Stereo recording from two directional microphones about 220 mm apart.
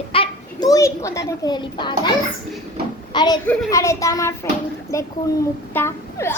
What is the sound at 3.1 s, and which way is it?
A child's voice, 20° left (ahead or behind).